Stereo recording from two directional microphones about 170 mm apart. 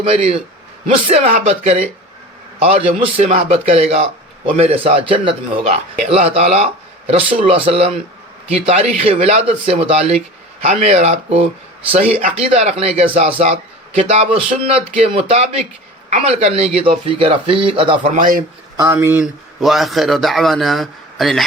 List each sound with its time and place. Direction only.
0.0 s a man's voice: 35° right (ahead or behind)
18.1 s speech: 55° right (ahead or behind)
18.8 s speech: 15° right (ahead or behind)
19.2 s speech: centre (ahead or behind)